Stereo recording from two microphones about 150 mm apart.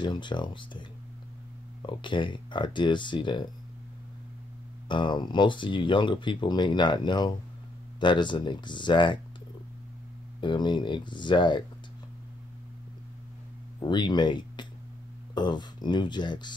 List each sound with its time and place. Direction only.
0.0 s speech: 30° left (ahead or behind)
1.9 s speech: 30° left (ahead or behind)
4.8 s speech: 30° left (ahead or behind)
10.4 s speech: 30° left (ahead or behind)
13.7 s speech: 30° left (ahead or behind)